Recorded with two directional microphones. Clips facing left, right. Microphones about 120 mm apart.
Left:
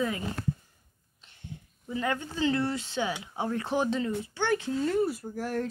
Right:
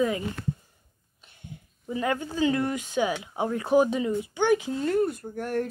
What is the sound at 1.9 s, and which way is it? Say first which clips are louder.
Speech: right 3 dB; 20° right (ahead or behind).